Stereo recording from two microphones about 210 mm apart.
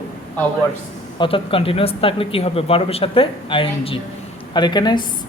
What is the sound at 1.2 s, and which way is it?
Speech, 25° left (ahead or behind).